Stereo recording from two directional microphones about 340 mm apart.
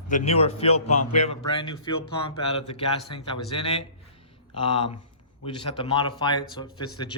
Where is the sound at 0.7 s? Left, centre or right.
Left.